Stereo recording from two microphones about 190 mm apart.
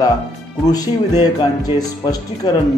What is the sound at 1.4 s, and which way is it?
Speech, 20° left (ahead or behind).